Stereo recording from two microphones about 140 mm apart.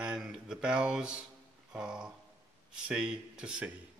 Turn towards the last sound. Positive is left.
turn(degrees=-5)  # may be behind; listen again after turning